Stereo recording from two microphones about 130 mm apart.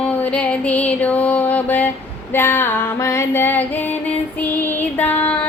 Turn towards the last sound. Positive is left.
turn(degrees=15)  # may be behind; listen again after turning